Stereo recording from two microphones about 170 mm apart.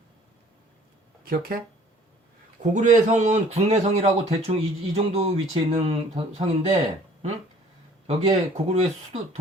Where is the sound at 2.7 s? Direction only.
45° right (ahead or behind).